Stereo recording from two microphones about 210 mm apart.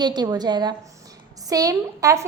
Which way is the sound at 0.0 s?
20° right (ahead or behind).